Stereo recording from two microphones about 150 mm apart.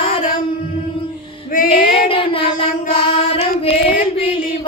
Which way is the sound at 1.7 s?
35° left (ahead or behind).